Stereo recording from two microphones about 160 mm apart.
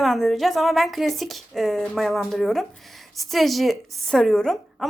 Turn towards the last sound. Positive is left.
turn(degrees=0)  # may be behind; listen again after turning